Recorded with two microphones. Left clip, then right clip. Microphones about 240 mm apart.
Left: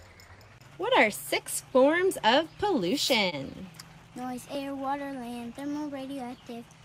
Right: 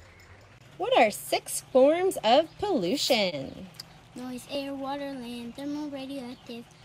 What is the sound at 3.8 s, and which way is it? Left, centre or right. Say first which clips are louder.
A woman's voice: left 2 dB; centre.